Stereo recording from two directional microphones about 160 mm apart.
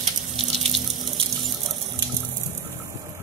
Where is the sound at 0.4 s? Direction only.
35° right (ahead or behind).